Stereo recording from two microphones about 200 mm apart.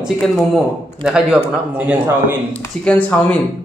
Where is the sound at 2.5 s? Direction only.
5° left (ahead or behind).